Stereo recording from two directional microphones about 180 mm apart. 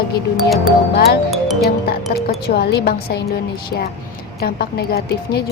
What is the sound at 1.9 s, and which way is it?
A woman's voice, 60° left (ahead or behind).